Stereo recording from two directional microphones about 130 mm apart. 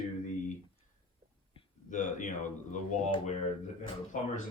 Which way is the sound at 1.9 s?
85° left.